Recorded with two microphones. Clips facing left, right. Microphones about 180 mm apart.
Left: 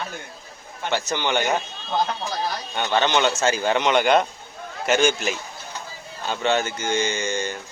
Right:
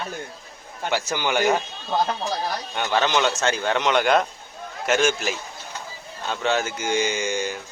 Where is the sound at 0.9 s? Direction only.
10° right (ahead or behind).